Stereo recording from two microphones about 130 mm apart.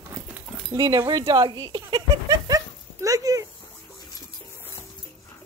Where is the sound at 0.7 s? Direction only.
30° right (ahead or behind).